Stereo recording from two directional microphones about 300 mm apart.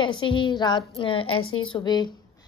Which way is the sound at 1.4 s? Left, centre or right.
Left.